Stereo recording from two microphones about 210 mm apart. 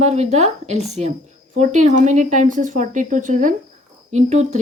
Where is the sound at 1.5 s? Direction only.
35° right (ahead or behind).